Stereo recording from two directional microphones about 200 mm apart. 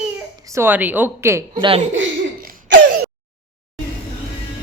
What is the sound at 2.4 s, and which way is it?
Cough, 45° right (ahead or behind).